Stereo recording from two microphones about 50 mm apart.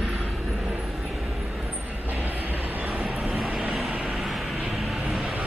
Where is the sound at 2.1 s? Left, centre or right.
Right.